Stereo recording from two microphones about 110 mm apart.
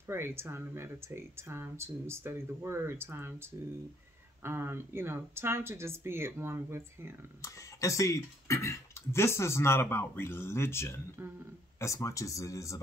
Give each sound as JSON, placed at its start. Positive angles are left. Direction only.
{"t": 0.0, "sound": "speech", "side_deg": -20}
{"t": 7.4, "sound": "speech", "side_deg": 30}